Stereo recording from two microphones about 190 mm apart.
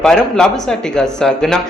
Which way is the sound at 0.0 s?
5° left (ahead or behind).